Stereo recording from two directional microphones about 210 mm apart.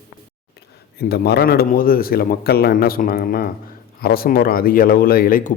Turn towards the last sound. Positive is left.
turn(degrees=40)  # may be behind; listen again after turning